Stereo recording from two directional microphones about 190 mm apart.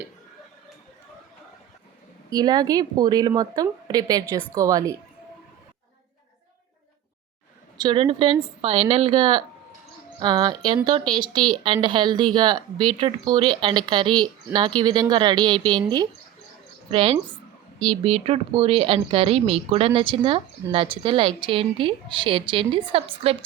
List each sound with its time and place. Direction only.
2.3 s a woman's voice: 20° right (ahead or behind)
7.8 s a woman's voice: 25° right (ahead or behind)